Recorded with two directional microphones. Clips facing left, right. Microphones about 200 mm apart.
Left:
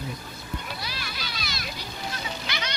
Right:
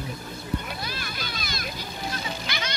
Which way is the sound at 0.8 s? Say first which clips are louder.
Right 2 dB; 50° right (ahead or behind).